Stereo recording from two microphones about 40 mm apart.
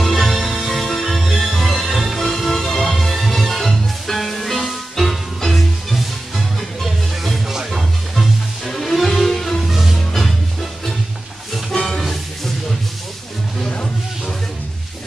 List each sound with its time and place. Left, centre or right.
0.0 s music: centre
8.6 s music: centre
9.7 s music: centre
11.7 s music: centre